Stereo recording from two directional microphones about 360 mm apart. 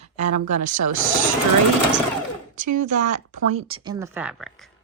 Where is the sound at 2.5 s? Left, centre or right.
Right; by 4.7 s centre.